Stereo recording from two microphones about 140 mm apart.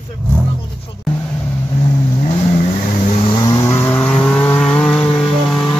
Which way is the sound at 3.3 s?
30° left (ahead or behind).